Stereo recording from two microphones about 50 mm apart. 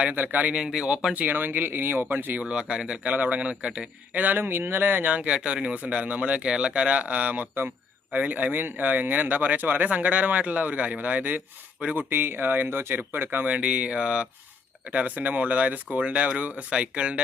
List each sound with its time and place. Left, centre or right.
0.0 s speech: right
0.6 s speech: centre
1.1 s speech: right
2.4 s speech: right
3.1 s speech: right
4.4 s speech: right
5.0 s speech: right
11.9 s speech: right
13.4 s speech: right